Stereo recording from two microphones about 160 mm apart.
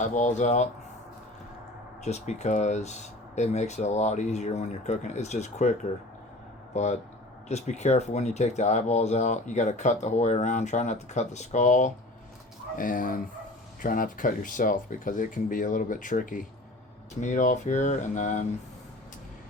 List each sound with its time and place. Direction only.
0.0 s speech: 50° left (ahead or behind)
2.0 s speech: 45° left (ahead or behind)
6.7 s speech: 45° left (ahead or behind)